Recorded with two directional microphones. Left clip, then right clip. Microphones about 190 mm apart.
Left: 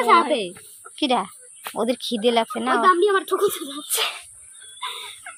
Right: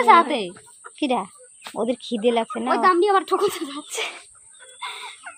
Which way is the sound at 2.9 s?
25° right (ahead or behind).